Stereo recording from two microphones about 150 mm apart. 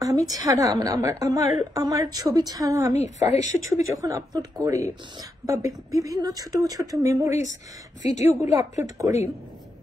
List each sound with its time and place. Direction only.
0.0 s a sound: 25° right (ahead or behind)
0.4 s a woman's voice: 20° right (ahead or behind)
3.0 s a woman's voice: 50° left (ahead or behind)
3.7 s a woman's voice: 25° right (ahead or behind)
8.0 s a woman's voice: 50° left (ahead or behind)
8.3 s a woman's voice: 15° right (ahead or behind)